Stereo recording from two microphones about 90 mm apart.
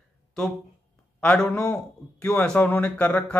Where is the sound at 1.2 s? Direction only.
10° left (ahead or behind).